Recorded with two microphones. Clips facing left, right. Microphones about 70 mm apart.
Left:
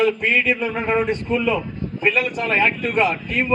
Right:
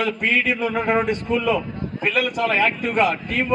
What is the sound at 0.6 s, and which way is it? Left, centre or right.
Speech, right.